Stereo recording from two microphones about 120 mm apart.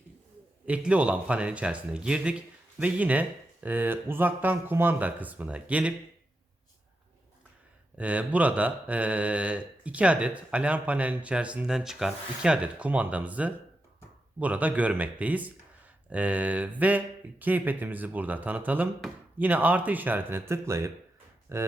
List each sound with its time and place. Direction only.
0.6 s speech: 10° right (ahead or behind)
7.9 s speech: 10° right (ahead or behind)